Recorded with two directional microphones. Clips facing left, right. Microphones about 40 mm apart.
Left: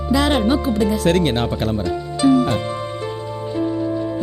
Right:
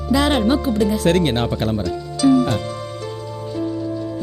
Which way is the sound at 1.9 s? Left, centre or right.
Left.